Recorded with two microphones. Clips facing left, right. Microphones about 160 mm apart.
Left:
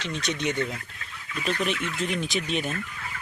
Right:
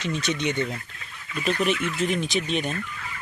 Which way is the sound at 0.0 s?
5° right (ahead or behind).